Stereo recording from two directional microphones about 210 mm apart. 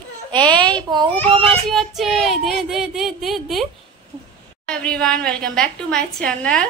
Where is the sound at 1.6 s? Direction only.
Centre (ahead or behind).